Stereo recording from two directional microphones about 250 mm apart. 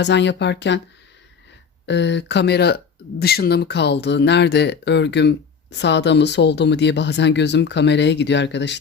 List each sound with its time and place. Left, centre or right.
0.0 s speech: left
1.9 s speech: left